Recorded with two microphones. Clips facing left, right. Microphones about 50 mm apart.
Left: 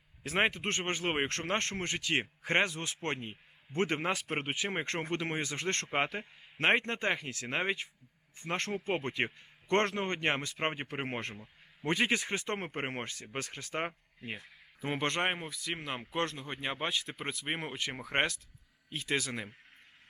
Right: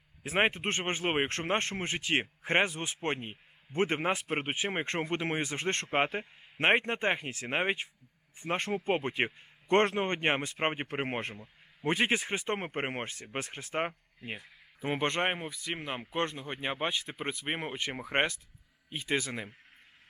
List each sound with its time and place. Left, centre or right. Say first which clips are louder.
0.2 s a man's voice: right 2 dB; centre
0.5 s speech: right 1 dB; right
13.8 s speech: right 2 dB; centre
16.1 s speech: right 1 dB; right
19.3 s speech: right 1 dB; centre